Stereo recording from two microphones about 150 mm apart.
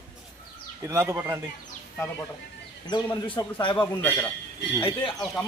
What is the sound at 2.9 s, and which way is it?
Speech, 30° left (ahead or behind).